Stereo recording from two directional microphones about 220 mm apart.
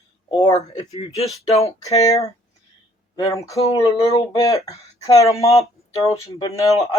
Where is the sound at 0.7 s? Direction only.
25° left (ahead or behind).